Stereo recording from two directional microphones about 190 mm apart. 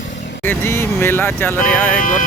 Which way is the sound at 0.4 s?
10° left (ahead or behind).